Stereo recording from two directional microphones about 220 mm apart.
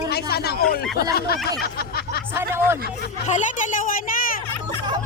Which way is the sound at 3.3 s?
35° left (ahead or behind).